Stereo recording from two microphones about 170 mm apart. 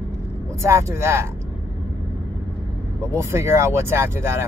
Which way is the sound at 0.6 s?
15° right (ahead or behind).